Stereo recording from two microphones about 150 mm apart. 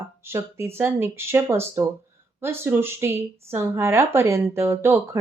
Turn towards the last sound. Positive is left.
turn(degrees=-15)  # may be behind; listen again after turning